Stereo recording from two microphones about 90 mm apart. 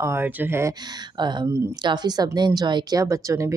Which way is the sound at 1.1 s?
55° right (ahead or behind).